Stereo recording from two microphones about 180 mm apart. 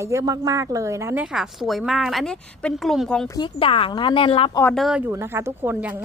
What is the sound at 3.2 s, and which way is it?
Speech, 25° left (ahead or behind).